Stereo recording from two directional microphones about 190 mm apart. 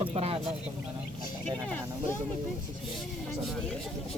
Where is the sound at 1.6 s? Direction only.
5° left (ahead or behind).